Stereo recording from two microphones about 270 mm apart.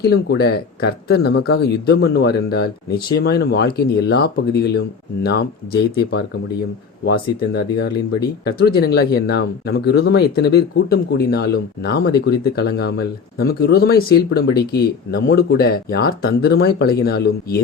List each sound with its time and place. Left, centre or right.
0.0 s speech: left